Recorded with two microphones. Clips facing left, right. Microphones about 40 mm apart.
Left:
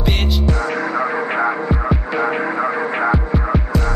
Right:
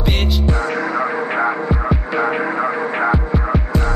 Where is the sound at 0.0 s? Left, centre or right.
Centre.